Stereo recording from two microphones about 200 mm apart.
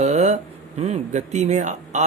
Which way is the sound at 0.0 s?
35° right (ahead or behind).